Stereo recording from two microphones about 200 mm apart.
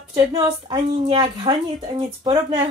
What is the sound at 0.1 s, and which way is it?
Speech, 20° right (ahead or behind).